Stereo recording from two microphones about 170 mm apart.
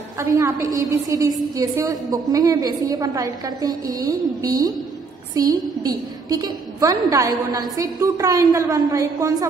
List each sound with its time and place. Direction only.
0.2 s a woman's voice: 20° right (ahead or behind)